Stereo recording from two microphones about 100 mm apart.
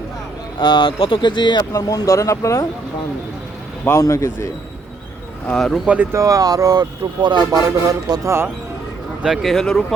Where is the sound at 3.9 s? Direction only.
30° left (ahead or behind).